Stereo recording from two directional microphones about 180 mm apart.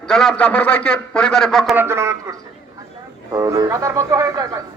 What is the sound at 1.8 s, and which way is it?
A man's voice, 15° right (ahead or behind).